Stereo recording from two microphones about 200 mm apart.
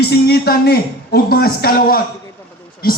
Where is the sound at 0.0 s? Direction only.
55° left (ahead or behind).